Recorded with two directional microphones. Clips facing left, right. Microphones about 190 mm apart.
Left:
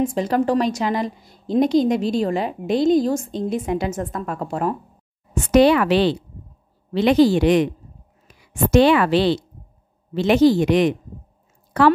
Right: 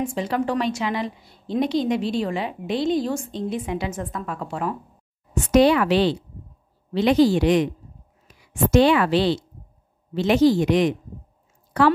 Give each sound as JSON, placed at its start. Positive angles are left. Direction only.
{"t": 0.0, "sound": "a woman's voice", "side_deg": 40}
{"t": 5.5, "sound": "speech", "side_deg": 65}
{"t": 8.7, "sound": "speech", "side_deg": 65}